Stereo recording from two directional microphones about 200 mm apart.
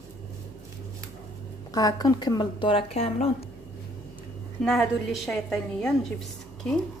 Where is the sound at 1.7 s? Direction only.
20° left (ahead or behind).